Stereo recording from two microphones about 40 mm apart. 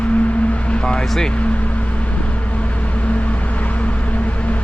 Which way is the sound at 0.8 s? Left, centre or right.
Centre.